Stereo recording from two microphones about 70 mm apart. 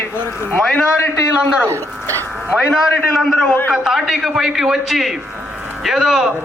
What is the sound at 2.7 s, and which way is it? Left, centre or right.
A man's voice, centre.